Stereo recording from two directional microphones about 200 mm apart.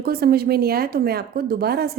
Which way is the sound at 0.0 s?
50° right (ahead or behind).